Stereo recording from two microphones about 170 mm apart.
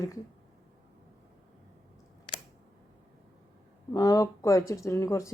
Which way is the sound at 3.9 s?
20° left (ahead or behind).